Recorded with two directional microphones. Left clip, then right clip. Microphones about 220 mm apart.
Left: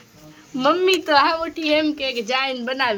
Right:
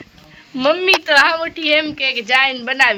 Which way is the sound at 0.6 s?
Centre (ahead or behind).